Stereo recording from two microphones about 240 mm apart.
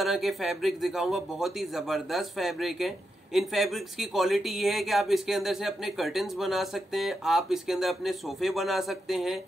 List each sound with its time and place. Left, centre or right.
0.0 s speech: centre